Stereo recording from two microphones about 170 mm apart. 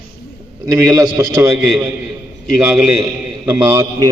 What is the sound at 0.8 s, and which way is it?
Speech, 15° right (ahead or behind).